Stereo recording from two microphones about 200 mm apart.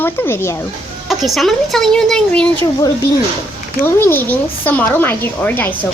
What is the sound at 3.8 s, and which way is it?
A woman's voice, 10° left (ahead or behind).